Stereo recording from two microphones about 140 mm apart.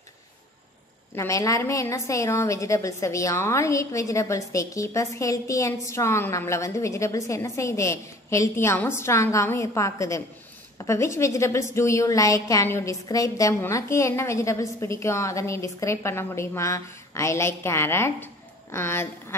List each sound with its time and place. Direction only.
1.1 s a woman's voice: 20° left (ahead or behind)